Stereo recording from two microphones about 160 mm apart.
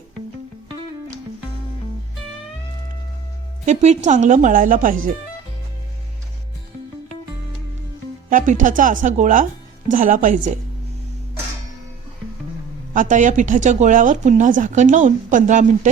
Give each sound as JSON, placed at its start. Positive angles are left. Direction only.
{"t": 3.7, "sound": "speech", "side_deg": -45}
{"t": 8.3, "sound": "speech", "side_deg": -55}
{"t": 12.9, "sound": "speech", "side_deg": -50}